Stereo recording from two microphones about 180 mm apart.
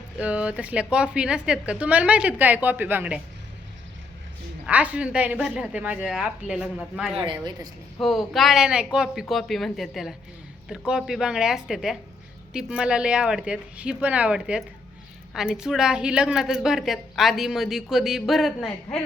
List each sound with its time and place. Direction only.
0.2 s speech: 5° right (ahead or behind)
4.6 s speech: 10° right (ahead or behind)
7.3 s speech: 25° right (ahead or behind)
7.9 s a woman's voice: centre (ahead or behind)